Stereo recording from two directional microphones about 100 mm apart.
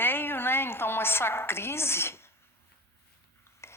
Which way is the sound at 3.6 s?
25° left (ahead or behind).